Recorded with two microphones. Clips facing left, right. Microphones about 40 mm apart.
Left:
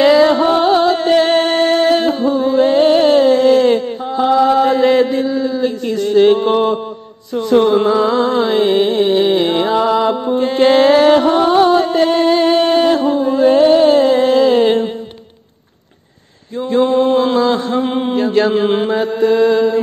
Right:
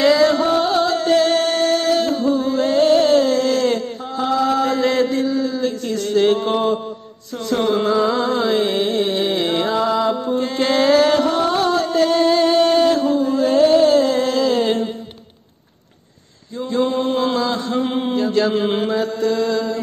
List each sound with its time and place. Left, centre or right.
0.0 s music: left
16.7 s mantra: left
18.7 s mantra: left